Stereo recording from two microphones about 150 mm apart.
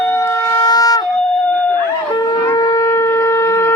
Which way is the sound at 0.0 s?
20° left (ahead or behind).